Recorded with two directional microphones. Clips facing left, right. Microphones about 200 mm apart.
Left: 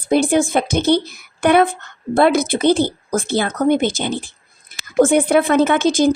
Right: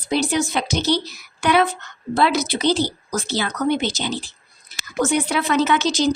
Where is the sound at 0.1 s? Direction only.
50° left (ahead or behind).